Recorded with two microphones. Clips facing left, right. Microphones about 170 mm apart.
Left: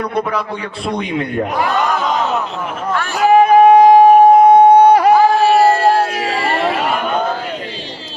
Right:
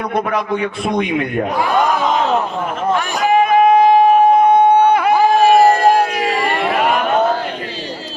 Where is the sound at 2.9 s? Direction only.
15° right (ahead or behind).